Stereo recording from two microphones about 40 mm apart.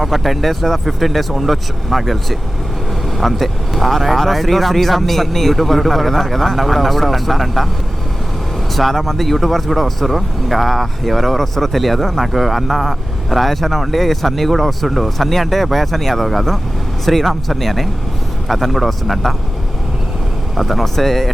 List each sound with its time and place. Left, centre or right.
0.0 s speech: centre
8.7 s speech: centre
20.6 s speech: centre